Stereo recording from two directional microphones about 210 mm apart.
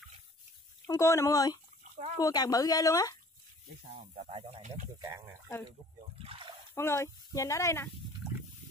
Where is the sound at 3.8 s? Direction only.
30° right (ahead or behind).